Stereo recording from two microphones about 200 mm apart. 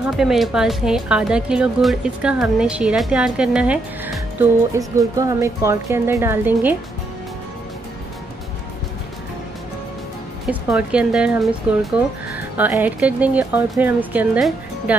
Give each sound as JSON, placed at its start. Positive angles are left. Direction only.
{"t": 0.0, "sound": "speech", "side_deg": 0}
{"t": 10.4, "sound": "speech", "side_deg": -5}